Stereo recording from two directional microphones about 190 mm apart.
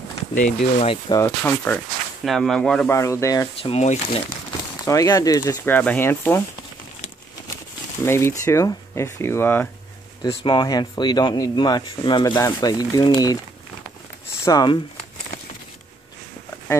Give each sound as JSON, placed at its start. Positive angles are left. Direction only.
{"t": 0.3, "sound": "speech", "side_deg": 40}
{"t": 1.2, "sound": "speech", "side_deg": 10}
{"t": 3.0, "sound": "speech", "side_deg": 15}
{"t": 3.7, "sound": "speech", "side_deg": 35}
{"t": 4.8, "sound": "speech", "side_deg": 15}
{"t": 8.0, "sound": "speech", "side_deg": 15}
{"t": 10.2, "sound": "speech", "side_deg": 25}
{"t": 14.4, "sound": "speech", "side_deg": 20}